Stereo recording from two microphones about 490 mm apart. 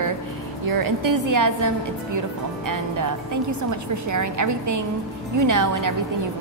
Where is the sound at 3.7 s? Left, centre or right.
Right.